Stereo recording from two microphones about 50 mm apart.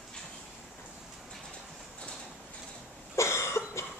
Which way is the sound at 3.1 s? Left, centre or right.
Left.